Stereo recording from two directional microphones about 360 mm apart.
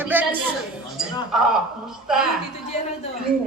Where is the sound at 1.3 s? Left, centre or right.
Centre.